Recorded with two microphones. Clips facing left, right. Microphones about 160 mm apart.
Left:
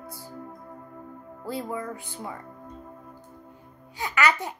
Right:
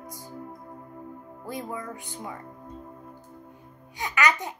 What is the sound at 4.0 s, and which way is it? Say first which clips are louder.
Speech: left 1 dB; 15° right (ahead or behind).